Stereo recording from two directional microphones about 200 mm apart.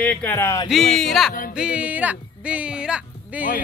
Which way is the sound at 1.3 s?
45° left (ahead or behind).